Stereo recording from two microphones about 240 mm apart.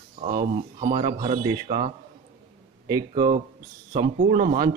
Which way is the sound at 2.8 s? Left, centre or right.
Centre.